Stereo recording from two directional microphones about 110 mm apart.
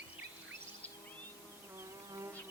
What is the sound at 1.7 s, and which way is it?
Bee, 25° right (ahead or behind).